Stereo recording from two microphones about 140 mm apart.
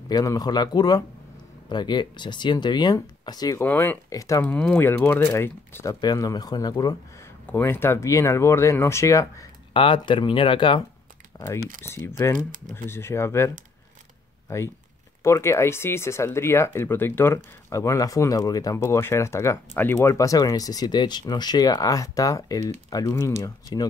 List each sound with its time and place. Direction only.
0.1 s speech: 25° left (ahead or behind)
3.6 s speech: 15° left (ahead or behind)
4.5 s speech: 10° left (ahead or behind)
5.9 s speech: 25° left (ahead or behind)
7.4 s speech: 15° left (ahead or behind)
9.8 s speech: 35° left (ahead or behind)
11.3 s speech: 20° left (ahead or behind)
12.4 s speech: 75° right (ahead or behind)
12.7 s speech: 15° left (ahead or behind)
14.5 s speech: 20° left (ahead or behind)